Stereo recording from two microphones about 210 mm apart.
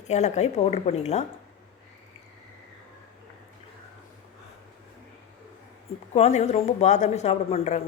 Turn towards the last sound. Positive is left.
turn(degrees=30)  # may be behind; listen again after turning